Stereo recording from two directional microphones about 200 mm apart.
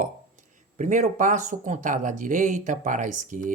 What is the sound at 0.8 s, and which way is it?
Speech, 40° right (ahead or behind).